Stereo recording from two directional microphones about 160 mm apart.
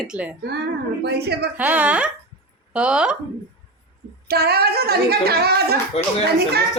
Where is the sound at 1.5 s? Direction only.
10° right (ahead or behind).